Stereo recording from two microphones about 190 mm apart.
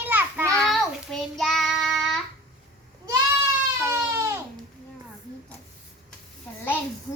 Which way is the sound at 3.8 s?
15° right (ahead or behind).